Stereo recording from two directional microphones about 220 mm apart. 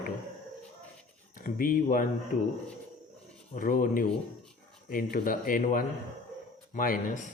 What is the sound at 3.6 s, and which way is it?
A man's voice, 40° left (ahead or behind).